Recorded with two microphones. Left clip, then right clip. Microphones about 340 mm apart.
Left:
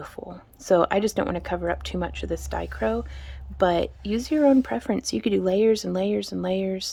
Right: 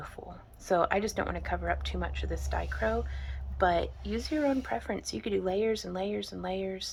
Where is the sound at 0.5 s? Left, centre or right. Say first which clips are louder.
Left 7 dB; left.